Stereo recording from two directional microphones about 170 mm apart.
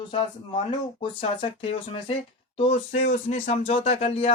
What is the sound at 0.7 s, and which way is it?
Speech, 30° left (ahead or behind).